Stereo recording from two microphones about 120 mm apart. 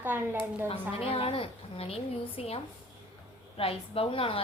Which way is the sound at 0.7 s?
55° left (ahead or behind).